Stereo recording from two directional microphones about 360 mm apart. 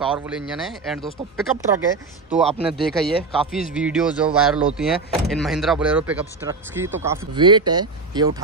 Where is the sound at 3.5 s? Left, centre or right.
Centre.